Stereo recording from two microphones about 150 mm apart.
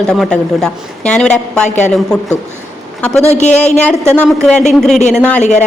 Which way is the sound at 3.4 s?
50° left (ahead or behind).